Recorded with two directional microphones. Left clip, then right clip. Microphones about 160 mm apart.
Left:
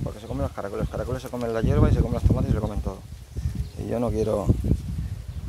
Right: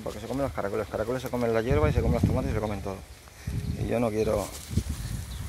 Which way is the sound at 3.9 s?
35° left (ahead or behind).